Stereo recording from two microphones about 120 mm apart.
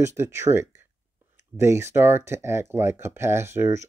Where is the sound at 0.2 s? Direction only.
20° right (ahead or behind).